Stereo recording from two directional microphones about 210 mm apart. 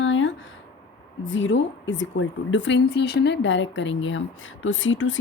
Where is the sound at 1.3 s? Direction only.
65° left (ahead or behind).